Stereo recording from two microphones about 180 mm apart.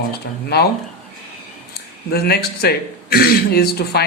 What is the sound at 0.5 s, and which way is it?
Speech, 65° left (ahead or behind).